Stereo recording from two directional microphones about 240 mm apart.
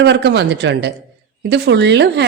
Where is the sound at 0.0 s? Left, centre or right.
Right.